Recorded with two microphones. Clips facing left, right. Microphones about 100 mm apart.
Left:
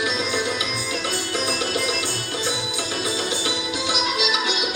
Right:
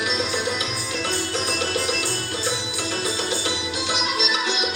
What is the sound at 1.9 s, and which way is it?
Music, 15° left (ahead or behind).